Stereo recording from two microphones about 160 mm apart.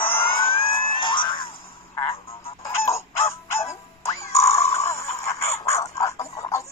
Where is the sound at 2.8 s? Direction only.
15° left (ahead or behind).